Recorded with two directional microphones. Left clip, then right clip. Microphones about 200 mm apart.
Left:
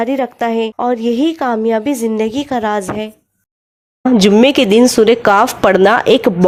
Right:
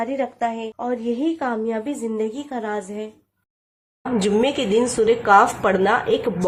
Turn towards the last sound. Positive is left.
turn(degrees=45)  # may be behind; listen again after turning